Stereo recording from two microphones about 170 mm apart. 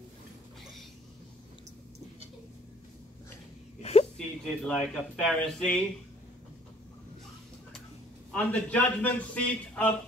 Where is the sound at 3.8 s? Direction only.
40° left (ahead or behind).